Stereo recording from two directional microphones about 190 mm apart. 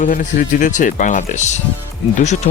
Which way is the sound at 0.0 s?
45° left (ahead or behind).